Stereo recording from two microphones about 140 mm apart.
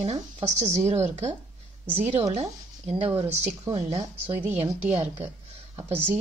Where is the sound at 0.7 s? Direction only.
55° right (ahead or behind).